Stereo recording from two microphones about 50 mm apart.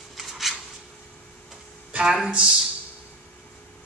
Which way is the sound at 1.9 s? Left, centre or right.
Centre.